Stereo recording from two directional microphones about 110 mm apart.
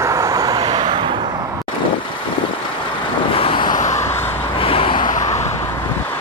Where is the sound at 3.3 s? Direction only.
55° left (ahead or behind).